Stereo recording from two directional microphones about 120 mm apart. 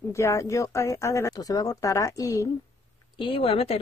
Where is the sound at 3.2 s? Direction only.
50° left (ahead or behind).